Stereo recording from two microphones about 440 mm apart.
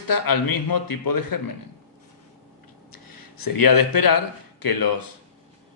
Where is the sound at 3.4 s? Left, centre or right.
Left.